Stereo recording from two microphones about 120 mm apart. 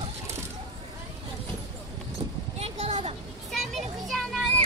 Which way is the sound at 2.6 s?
60° right (ahead or behind).